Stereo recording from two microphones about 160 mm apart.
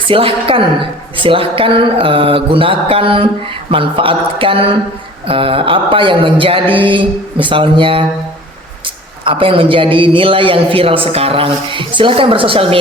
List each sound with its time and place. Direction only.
0.0 s a man's voice: 35° right (ahead or behind)
9.2 s a man's voice: 35° right (ahead or behind)